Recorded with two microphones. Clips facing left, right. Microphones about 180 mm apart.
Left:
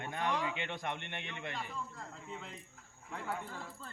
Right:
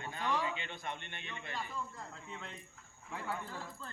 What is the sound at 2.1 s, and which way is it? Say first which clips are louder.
Speech: left 1 dB; 5° left (ahead or behind).